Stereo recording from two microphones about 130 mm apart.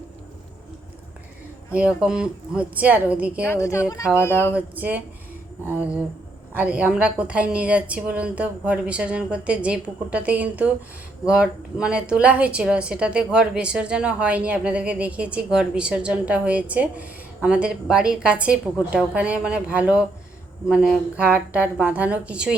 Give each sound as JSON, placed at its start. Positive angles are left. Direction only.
{"t": 1.7, "sound": "a woman's voice", "side_deg": -5}
{"t": 3.4, "sound": "speech", "side_deg": 20}
{"t": 4.5, "sound": "a woman's voice", "side_deg": -10}